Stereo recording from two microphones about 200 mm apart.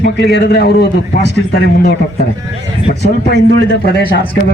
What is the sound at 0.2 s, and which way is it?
Speech, 55° left (ahead or behind).